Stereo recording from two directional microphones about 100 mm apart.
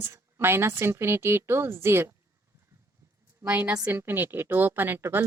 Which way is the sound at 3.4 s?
20° right (ahead or behind).